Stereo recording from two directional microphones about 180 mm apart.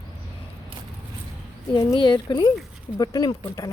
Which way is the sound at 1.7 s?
25° left (ahead or behind).